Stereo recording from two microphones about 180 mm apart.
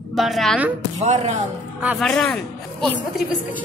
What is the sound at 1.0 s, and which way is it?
Speech, 35° right (ahead or behind).